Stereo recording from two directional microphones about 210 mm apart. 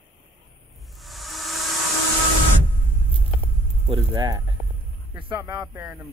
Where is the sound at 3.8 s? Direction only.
20° right (ahead or behind).